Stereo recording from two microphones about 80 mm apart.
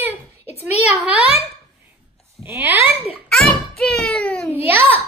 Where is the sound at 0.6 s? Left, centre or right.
Centre.